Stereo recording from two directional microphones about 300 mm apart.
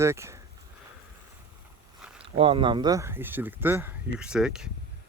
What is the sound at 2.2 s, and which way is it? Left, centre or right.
Speech, centre.